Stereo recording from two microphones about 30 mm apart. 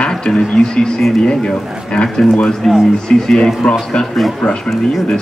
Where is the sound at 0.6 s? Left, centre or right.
Left.